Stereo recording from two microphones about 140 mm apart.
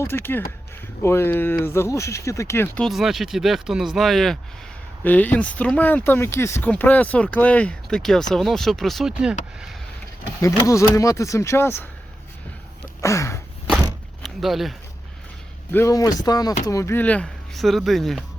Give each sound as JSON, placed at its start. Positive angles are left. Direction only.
{"t": 0.0, "sound": "speech", "side_deg": 15}
{"t": 2.7, "sound": "speech", "side_deg": 0}
{"t": 5.0, "sound": "speech", "side_deg": 10}
{"t": 10.4, "sound": "speech", "side_deg": 25}
{"t": 13.0, "sound": "speech", "side_deg": 20}
{"t": 14.2, "sound": "a sound", "side_deg": 0}
{"t": 15.7, "sound": "speech", "side_deg": 20}